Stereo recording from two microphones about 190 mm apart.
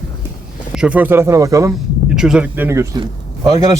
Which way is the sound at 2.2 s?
5° right (ahead or behind).